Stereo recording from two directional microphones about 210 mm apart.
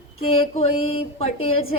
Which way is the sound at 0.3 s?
25° left (ahead or behind).